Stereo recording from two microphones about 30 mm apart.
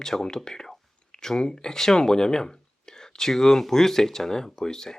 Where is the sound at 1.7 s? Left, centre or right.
Centre.